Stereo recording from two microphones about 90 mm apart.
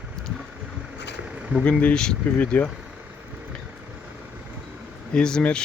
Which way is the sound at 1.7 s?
10° left (ahead or behind).